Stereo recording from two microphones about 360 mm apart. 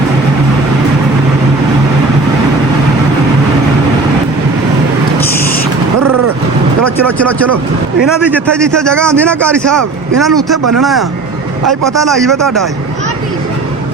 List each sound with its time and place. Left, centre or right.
8.3 s a man's voice: centre